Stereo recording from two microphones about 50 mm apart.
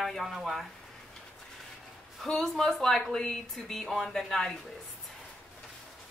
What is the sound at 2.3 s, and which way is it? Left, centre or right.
Speech, centre.